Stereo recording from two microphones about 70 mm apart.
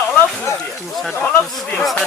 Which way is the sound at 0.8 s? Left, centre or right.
Centre.